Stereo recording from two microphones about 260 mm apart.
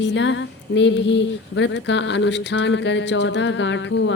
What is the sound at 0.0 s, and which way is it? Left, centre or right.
Speech, left.